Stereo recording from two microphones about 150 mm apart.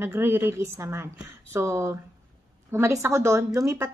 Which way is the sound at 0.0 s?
15° right (ahead or behind).